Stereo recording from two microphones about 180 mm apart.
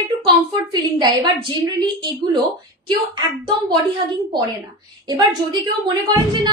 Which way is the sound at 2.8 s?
25° right (ahead or behind).